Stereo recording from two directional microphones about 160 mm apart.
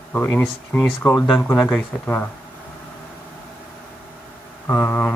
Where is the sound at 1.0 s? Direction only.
20° left (ahead or behind).